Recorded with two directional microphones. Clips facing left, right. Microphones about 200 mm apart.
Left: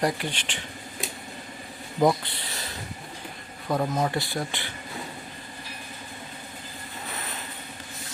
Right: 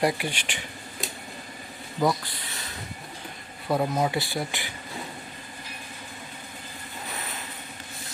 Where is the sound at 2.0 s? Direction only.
20° left (ahead or behind).